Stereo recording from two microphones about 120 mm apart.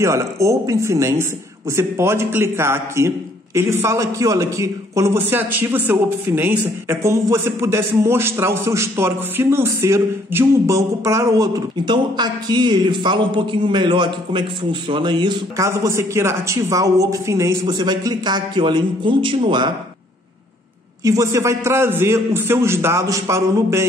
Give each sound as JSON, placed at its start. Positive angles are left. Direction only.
{"t": 0.0, "sound": "a man's voice", "side_deg": -25}
{"t": 15.5, "sound": "a man's voice", "side_deg": -25}
{"t": 17.7, "sound": "a man's voice", "side_deg": -35}
{"t": 21.0, "sound": "a man's voice", "side_deg": -30}